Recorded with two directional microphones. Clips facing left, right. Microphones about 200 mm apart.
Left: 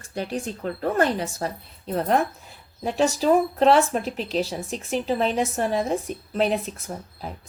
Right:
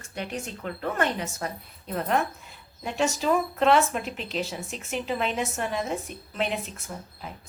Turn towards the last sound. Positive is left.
turn(degrees=35)  # may be behind; listen again after turning